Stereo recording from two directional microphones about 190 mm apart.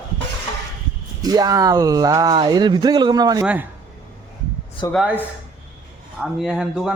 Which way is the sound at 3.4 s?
5° right (ahead or behind).